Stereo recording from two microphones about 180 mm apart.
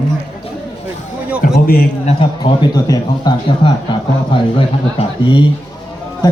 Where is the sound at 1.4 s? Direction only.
55° left (ahead or behind).